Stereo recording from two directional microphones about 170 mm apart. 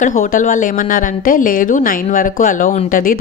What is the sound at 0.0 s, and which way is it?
A woman's voice, 55° left (ahead or behind).